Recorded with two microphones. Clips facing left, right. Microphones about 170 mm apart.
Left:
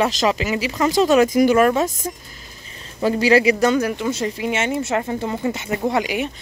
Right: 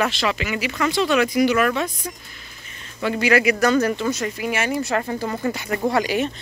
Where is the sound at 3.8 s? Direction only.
10° left (ahead or behind).